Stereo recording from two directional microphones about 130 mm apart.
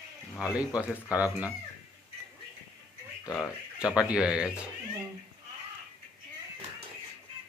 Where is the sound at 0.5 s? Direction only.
10° right (ahead or behind).